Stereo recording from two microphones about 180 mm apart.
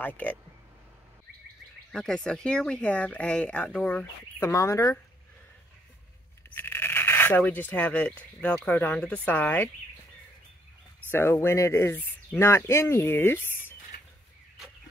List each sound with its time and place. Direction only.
0.0 s speech: 10° left (ahead or behind)
1.9 s speech: centre (ahead or behind)
6.5 s a sound: 10° left (ahead or behind)
8.4 s speech: 10° left (ahead or behind)
11.1 s speech: 10° left (ahead or behind)